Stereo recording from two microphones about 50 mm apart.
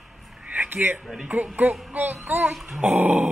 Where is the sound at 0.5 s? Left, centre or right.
Right.